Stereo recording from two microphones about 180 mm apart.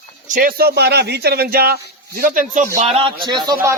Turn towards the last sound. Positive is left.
turn(degrees=-20)  # may be behind; listen again after turning